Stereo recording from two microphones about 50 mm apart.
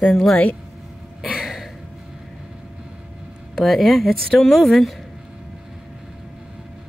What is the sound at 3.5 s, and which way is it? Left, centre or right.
Speech, centre.